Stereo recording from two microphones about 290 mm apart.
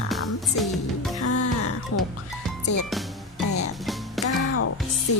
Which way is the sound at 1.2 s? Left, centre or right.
Left.